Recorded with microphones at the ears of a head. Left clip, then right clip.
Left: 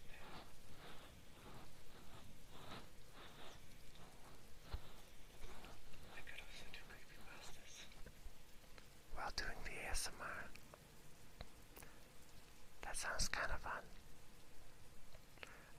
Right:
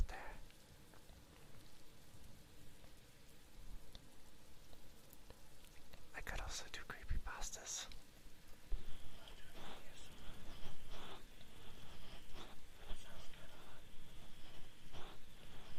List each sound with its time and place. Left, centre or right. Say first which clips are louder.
6.1 s whispering: right 7 dB; right
9.1 s whispering: left 15 dB; left
10.6 s whispering: right 7 dB; right
12.8 s whispering: left 15 dB; left